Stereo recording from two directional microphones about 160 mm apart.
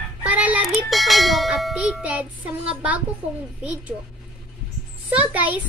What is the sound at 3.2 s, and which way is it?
Speech, 40° right (ahead or behind).